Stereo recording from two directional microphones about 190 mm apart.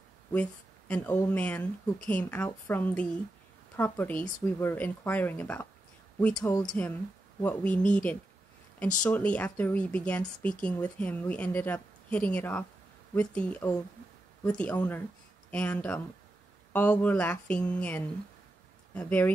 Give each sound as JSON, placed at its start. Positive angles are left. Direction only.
{"t": 0.3, "sound": "speech", "side_deg": 5}
{"t": 6.3, "sound": "speech", "side_deg": 20}
{"t": 7.4, "sound": "speech", "side_deg": 5}